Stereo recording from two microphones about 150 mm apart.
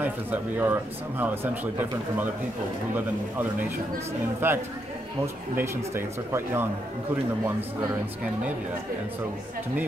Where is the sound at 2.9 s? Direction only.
10° right (ahead or behind).